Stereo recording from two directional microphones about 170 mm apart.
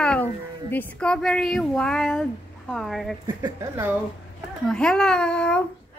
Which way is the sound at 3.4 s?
25° right (ahead or behind).